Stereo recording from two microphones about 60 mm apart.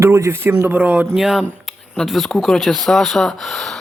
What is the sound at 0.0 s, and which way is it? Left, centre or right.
Speech, right.